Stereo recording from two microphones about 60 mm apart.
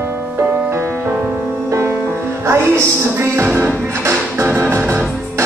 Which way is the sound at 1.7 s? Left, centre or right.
Right.